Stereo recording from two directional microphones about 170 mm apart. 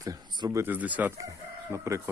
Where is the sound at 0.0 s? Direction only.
20° right (ahead or behind).